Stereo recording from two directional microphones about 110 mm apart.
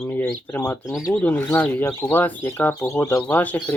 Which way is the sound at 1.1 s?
15° left (ahead or behind).